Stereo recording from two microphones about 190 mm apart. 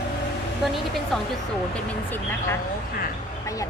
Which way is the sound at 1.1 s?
Centre (ahead or behind).